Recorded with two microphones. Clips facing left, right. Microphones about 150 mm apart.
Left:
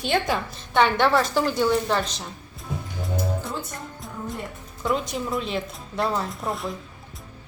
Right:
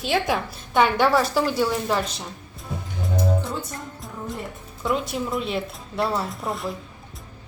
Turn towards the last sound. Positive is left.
turn(degrees=0)  # may be behind; listen again after turning